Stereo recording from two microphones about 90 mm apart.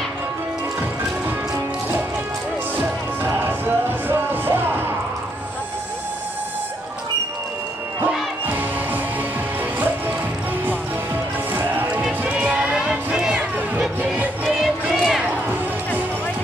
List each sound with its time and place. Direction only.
2.8 s music: 20° right (ahead or behind)
8.5 s music: 20° right (ahead or behind)
11.5 s music: 20° right (ahead or behind)
12.2 s run: 15° right (ahead or behind)
12.7 s music: 5° right (ahead or behind)
14.4 s a sound: centre (ahead or behind)